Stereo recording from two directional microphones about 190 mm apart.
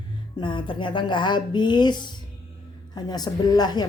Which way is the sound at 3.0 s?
20° left (ahead or behind).